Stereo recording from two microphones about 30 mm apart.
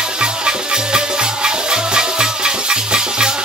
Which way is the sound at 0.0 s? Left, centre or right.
Right.